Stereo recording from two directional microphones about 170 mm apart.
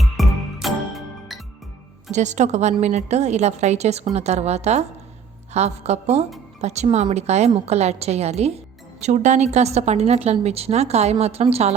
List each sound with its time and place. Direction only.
0.0 s music: centre (ahead or behind)
2.1 s a woman's voice: 45° right (ahead or behind)